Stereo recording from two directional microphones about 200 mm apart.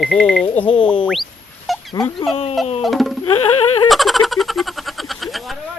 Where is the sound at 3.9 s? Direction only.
Centre (ahead or behind).